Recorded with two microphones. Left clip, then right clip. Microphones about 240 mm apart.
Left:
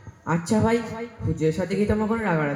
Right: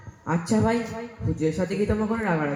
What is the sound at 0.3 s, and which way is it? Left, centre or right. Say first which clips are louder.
A man's voice: left 2 dB; left.